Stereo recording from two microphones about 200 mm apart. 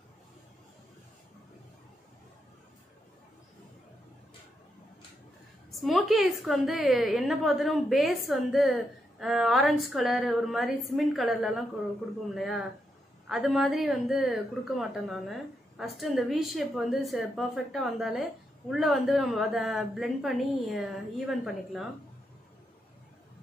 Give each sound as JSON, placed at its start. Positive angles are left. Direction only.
{"t": 5.7, "sound": "a woman's voice", "side_deg": 0}